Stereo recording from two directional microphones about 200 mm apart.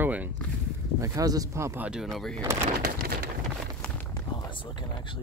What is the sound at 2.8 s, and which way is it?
Pigeon, 50° right (ahead or behind).